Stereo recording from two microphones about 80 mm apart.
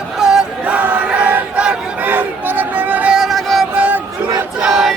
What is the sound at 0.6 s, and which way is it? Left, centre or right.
Battle cry, right.